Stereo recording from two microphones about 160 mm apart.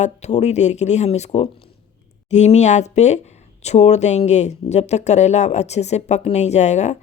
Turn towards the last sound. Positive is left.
turn(degrees=45)  # may be behind; listen again after turning